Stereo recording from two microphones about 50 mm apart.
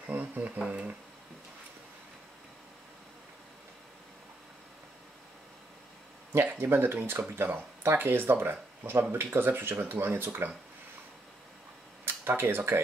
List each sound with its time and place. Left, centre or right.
0.1 s a sound: right
6.3 s speech: right
12.0 s speech: right